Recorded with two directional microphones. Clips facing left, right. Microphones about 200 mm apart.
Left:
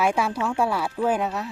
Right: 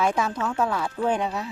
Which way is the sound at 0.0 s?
10° left (ahead or behind).